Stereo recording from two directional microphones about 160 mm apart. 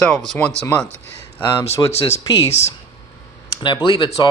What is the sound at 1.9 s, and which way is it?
Speech, 40° left (ahead or behind).